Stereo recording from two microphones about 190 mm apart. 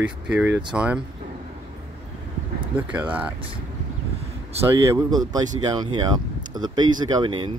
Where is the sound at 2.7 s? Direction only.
10° right (ahead or behind).